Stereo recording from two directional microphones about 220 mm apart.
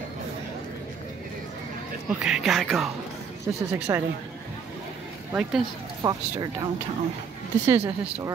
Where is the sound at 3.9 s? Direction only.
15° right (ahead or behind).